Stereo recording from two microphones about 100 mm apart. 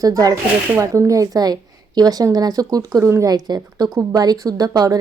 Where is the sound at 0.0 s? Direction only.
35° right (ahead or behind).